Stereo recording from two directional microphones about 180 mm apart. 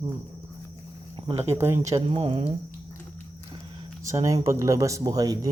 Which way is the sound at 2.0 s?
30° right (ahead or behind).